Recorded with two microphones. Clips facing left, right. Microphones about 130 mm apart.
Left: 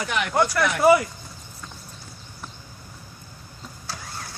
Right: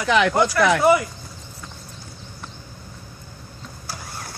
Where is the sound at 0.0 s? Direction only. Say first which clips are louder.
Right 5 dB; 90° right.